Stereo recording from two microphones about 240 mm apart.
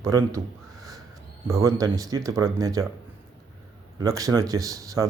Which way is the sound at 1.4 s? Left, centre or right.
Centre.